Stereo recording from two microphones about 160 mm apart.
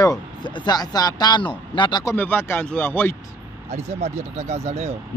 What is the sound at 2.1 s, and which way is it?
Speech, 10° left (ahead or behind).